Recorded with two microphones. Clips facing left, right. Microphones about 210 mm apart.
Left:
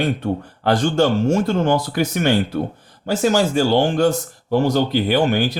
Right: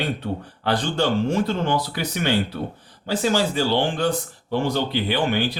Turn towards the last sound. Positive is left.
turn(degrees=45)  # may be behind; listen again after turning